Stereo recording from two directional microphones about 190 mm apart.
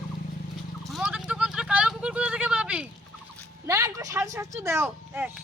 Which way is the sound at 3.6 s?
15° right (ahead or behind).